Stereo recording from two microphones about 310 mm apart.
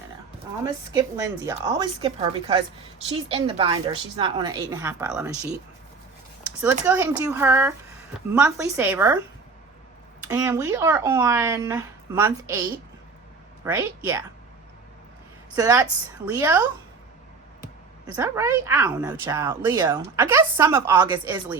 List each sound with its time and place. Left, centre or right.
0.9 s speech: centre
6.8 s speech: centre
10.2 s speech: centre
13.7 s speech: centre
15.5 s speech: centre
18.0 s speech: centre